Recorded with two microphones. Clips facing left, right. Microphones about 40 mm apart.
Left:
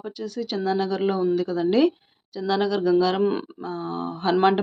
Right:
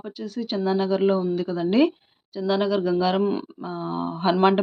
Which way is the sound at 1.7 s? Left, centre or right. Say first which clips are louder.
Right 1 dB; centre.